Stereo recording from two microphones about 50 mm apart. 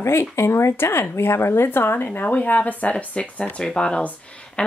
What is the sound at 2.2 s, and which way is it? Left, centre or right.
Speech, left.